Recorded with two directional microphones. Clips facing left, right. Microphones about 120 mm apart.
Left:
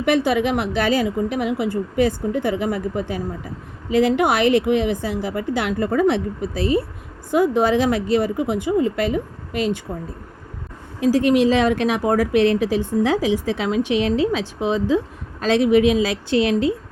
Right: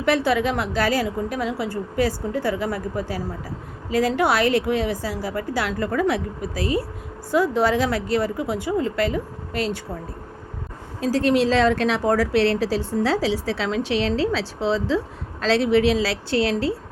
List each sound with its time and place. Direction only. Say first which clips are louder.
0.0 s a woman's voice: left 2 dB; 20° left (ahead or behind)
11.0 s a woman's voice: left 3 dB; 15° left (ahead or behind)